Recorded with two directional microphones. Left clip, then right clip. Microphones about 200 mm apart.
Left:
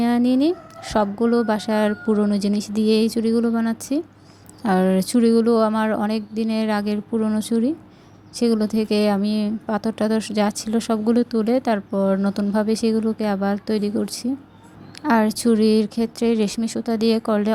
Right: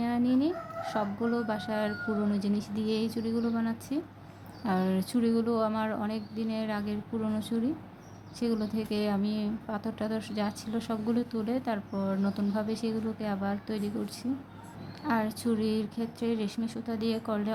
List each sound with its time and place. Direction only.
0.0 s a woman's voice: 40° left (ahead or behind)